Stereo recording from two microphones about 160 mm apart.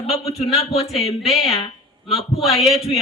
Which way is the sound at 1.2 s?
Centre (ahead or behind).